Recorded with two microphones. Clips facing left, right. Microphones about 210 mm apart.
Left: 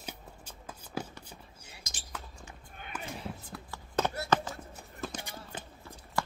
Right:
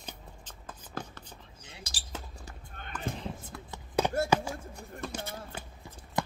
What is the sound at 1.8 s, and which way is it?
Basketball bounce, 35° right (ahead or behind).